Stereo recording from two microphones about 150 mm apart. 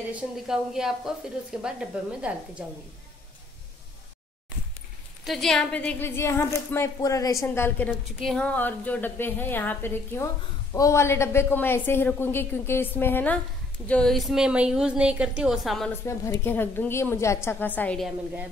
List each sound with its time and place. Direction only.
0.1 s a woman's voice: 5° right (ahead or behind)
5.2 s a woman's voice: centre (ahead or behind)
16.0 s a woman's voice: 15° left (ahead or behind)
18.0 s a woman's voice: 10° right (ahead or behind)